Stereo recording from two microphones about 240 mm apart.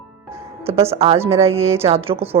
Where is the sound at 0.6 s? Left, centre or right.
Right.